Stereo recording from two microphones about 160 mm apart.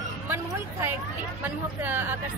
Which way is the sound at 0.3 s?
15° right (ahead or behind).